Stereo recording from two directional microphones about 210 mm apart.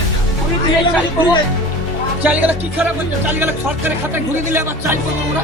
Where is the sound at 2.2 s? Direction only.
5° right (ahead or behind).